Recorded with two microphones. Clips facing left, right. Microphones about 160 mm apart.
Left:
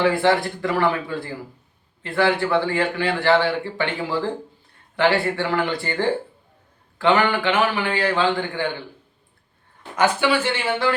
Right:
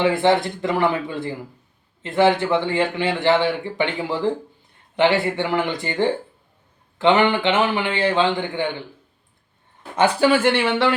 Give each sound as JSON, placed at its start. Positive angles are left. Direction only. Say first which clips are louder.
{"t": 0.0, "sound": "speech", "louder": "right 1 dB", "side_deg": -20}
{"t": 9.9, "sound": "speech", "louder": "right 2 dB", "side_deg": -25}
{"t": 10.2, "sound": "speech", "louder": "right 4 dB", "side_deg": -60}